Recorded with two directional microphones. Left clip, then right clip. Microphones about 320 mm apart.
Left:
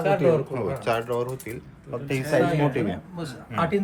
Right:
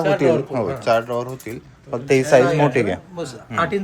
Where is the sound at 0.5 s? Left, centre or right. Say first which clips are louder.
Right 7 dB; centre.